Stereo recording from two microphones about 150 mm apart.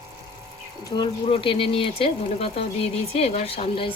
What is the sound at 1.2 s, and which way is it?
Speech, 40° left (ahead or behind).